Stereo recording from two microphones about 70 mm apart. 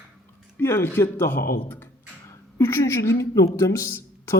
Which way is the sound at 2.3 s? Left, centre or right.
Left.